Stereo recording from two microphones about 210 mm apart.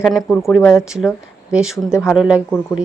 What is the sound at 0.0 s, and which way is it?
Speech, centre (ahead or behind).